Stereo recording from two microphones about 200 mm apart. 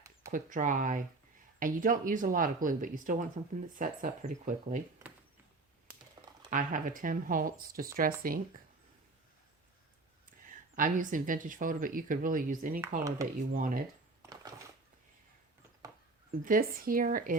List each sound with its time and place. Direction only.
0.3 s speech: 40° right (ahead or behind)
6.2 s typing: 20° right (ahead or behind)
6.5 s speech: 40° right (ahead or behind)
10.5 s speech: 40° right (ahead or behind)
14.2 s a sound: 20° right (ahead or behind)
16.4 s speech: 45° right (ahead or behind)